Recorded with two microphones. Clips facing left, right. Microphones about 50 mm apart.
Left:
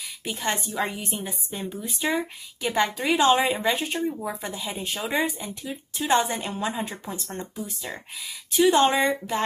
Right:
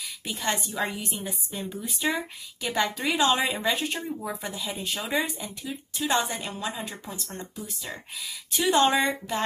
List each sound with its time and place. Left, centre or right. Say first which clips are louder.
0.3 s speech: left 1 dB; centre
5.7 s speech: left 4 dB; left
8.2 s speech: left 8 dB; centre